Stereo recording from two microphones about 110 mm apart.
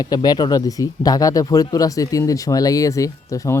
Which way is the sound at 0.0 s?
35° left (ahead or behind).